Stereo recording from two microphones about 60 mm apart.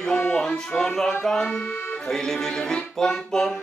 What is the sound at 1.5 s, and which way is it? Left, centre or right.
Speech, left.